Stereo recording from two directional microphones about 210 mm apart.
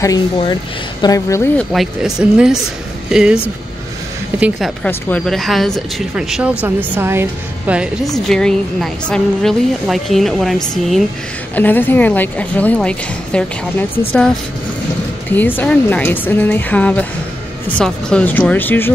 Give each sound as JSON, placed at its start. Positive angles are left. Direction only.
{"t": 0.0, "sound": "a woman's voice", "side_deg": 20}
{"t": 1.7, "sound": "a woman's voice", "side_deg": 0}
{"t": 4.4, "sound": "a woman's voice", "side_deg": 0}
{"t": 15.3, "sound": "a woman's voice", "side_deg": 10}